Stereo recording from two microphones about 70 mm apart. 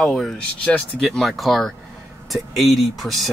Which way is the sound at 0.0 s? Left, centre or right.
Centre.